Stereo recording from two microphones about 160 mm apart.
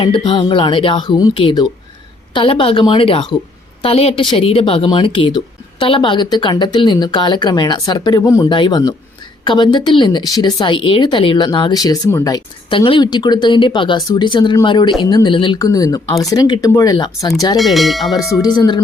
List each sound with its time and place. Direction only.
0.0 s speech: 30° left (ahead or behind)
17.6 s speech: centre (ahead or behind)
18.2 s speech: 20° left (ahead or behind)